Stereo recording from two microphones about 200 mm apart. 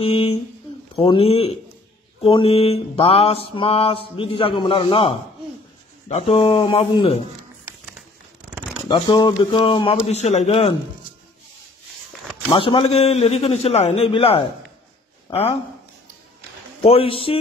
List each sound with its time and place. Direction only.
0.0 s mantra: 30° left (ahead or behind)
6.0 s a man's voice: 30° left (ahead or behind)
8.8 s mantra: 20° left (ahead or behind)
12.4 s a man's voice: 25° left (ahead or behind)
16.8 s mantra: 30° left (ahead or behind)